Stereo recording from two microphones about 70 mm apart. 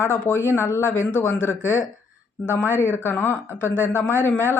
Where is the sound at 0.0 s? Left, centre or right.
Left.